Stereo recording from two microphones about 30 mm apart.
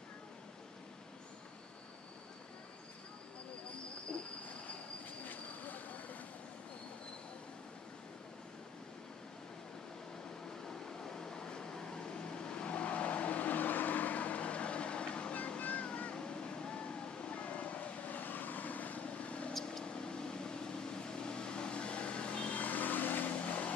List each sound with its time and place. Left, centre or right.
4.1 s cricket: left
5.2 s vehicle: left
10.6 s vehicle: centre; by 15.3 s left
15.8 s cat: left
16.2 s a sound: left
17.4 s a sound: left
18.1 s vehicle: left
19.0 s vehicle: left
19.6 s vehicle: left
22.6 s vehicle: left
23.3 s vehicle: left